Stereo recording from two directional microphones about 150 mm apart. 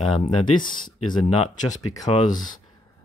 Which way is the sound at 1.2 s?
45° left (ahead or behind).